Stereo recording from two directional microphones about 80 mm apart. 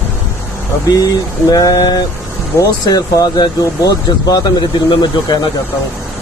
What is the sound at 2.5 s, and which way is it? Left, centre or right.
A man's voice, left.